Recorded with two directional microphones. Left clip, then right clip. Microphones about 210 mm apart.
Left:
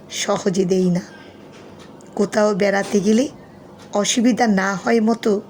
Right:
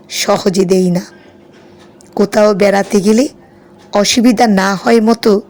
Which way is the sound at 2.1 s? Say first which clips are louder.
Right 8 dB; 15° right (ahead or behind).